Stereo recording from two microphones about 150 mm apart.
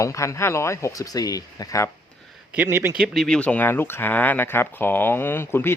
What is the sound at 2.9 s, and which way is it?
Speech, centre (ahead or behind).